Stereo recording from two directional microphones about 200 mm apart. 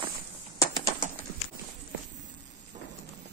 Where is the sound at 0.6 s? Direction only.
15° left (ahead or behind).